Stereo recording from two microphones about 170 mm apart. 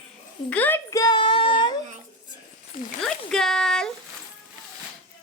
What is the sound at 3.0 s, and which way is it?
Speech, 5° left (ahead or behind).